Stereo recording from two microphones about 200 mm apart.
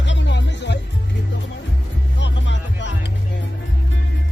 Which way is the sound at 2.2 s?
65° left (ahead or behind).